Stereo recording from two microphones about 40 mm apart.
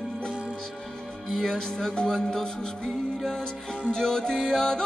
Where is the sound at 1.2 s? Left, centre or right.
Centre.